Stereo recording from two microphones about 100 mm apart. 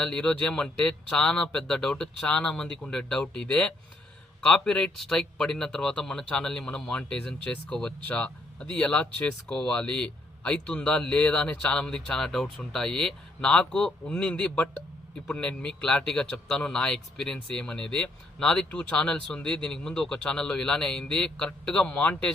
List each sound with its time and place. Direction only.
0.0 s speech: 5° left (ahead or behind)